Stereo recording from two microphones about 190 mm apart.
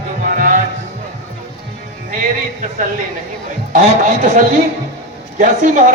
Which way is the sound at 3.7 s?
45° right (ahead or behind).